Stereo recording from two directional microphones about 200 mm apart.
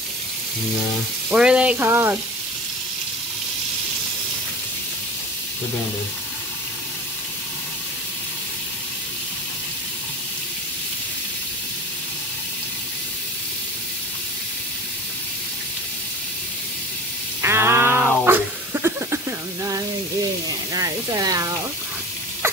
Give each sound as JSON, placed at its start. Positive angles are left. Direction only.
{"t": 1.3, "sound": "sizzle", "side_deg": -5}
{"t": 17.4, "sound": "a sound", "side_deg": -10}
{"t": 20.7, "sound": "speech", "side_deg": -20}